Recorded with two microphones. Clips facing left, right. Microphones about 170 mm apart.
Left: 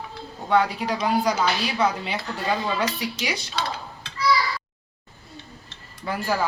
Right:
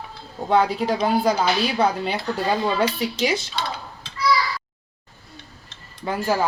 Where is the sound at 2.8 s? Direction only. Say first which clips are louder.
Right 5 dB; 25° right (ahead or behind).